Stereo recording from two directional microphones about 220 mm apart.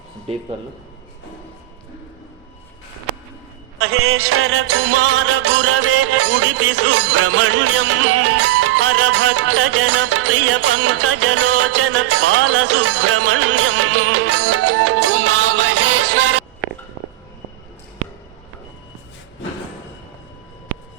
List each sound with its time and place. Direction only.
0.3 s speech: 25° right (ahead or behind)
3.8 s music: 75° right (ahead or behind); by 16.4 s 90° right